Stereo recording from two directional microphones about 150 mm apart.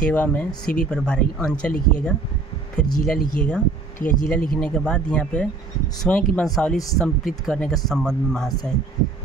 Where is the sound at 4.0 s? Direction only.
60° left (ahead or behind).